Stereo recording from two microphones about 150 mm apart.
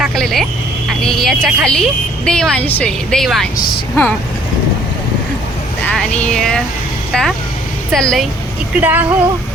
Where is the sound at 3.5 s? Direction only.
90° left.